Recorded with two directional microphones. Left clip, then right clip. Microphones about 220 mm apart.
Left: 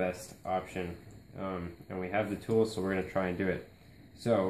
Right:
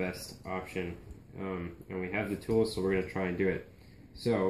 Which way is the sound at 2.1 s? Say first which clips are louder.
Left 1 dB; 10° left (ahead or behind).